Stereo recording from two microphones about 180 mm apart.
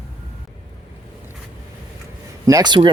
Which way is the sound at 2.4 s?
20° right (ahead or behind).